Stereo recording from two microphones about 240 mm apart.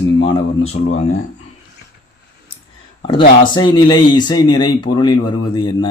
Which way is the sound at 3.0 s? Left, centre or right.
Left.